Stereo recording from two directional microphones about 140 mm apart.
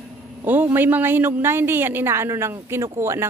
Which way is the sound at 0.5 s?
15° right (ahead or behind).